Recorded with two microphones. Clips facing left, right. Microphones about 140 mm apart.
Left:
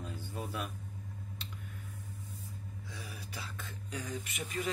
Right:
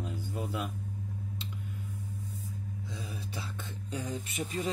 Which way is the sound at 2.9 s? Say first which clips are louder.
Right 4 dB; 20° right (ahead or behind).